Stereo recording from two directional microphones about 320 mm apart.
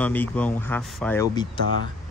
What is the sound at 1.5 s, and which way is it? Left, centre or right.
Speech, right.